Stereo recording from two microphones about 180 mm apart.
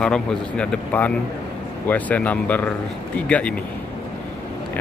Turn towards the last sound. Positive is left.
turn(degrees=5)  # may be behind; listen again after turning